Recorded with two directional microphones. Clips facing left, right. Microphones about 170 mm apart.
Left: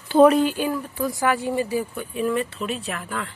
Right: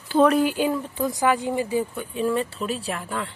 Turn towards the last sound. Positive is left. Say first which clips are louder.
# right 1 dB
turn(degrees=-25)  # may be behind; listen again after turning